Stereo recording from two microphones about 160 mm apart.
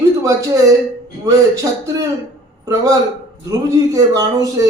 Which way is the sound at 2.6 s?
20° right (ahead or behind).